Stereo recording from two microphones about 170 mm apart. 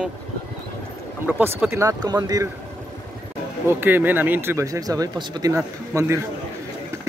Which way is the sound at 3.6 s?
10° right (ahead or behind).